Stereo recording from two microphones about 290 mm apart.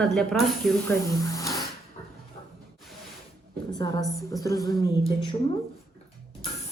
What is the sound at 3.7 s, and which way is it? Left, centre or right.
Speech, centre.